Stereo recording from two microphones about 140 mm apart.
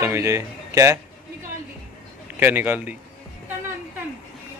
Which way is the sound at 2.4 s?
15° right (ahead or behind).